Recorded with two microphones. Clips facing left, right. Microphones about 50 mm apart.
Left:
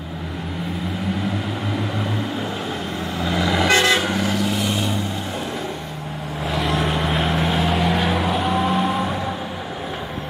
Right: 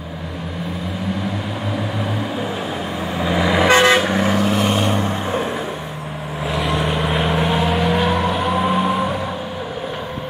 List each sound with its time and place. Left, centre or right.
3.2 s vehicle: centre
3.7 s toot: right
4.1 s vehicle: right
6.4 s vehicle: centre